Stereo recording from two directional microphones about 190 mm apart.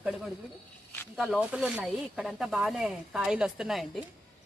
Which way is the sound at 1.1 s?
Centre (ahead or behind).